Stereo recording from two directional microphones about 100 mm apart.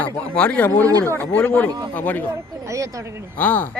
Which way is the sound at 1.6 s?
35° right (ahead or behind).